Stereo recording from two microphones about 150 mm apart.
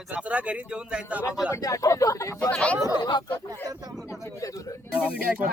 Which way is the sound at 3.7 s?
25° right (ahead or behind).